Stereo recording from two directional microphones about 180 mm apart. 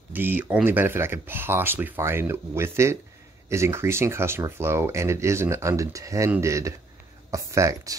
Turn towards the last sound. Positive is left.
turn(degrees=-20)  # may be behind; listen again after turning